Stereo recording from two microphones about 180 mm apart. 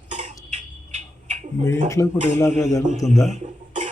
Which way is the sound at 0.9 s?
40° right (ahead or behind).